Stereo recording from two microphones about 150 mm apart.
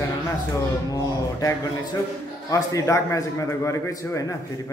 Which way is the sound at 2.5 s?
20° left (ahead or behind).